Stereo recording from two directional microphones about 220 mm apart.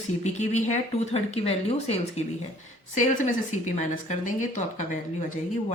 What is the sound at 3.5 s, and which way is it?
Speech, 35° left (ahead or behind).